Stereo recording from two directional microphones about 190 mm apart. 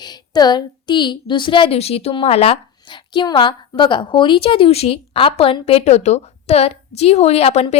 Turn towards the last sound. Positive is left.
turn(degrees=35)  # may be behind; listen again after turning